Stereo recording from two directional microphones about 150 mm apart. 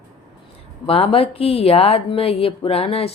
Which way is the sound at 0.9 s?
40° left (ahead or behind).